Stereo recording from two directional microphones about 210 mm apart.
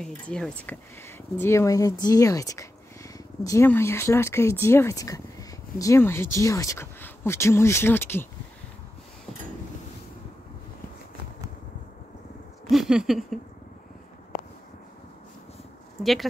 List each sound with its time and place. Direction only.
0.0 s speech: 5° left (ahead or behind)
12.6 s a sound: centre (ahead or behind)
16.0 s speech: centre (ahead or behind)